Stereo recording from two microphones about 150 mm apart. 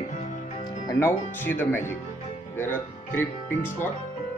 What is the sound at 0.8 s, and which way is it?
Speech, 15° left (ahead or behind).